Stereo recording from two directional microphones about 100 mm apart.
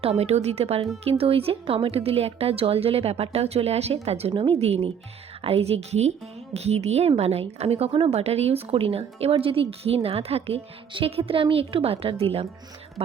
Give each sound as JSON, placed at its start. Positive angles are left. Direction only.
{"t": 0.0, "sound": "speech", "side_deg": -90}
{"t": 1.2, "sound": "speech", "side_deg": -75}
{"t": 4.3, "sound": "speech", "side_deg": -60}